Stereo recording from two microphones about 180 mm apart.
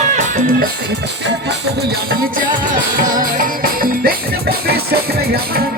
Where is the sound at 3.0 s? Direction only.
50° right (ahead or behind).